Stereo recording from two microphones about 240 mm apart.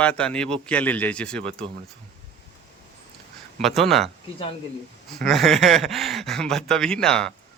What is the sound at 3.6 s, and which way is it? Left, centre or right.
Speech, centre.